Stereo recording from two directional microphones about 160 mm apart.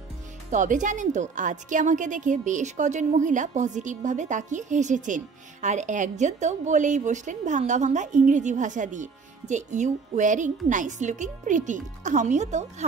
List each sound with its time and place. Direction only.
0.5 s a woman's voice: 50° right (ahead or behind)